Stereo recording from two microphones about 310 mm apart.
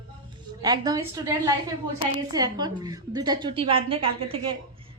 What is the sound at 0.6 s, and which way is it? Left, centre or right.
A woman's voice, centre.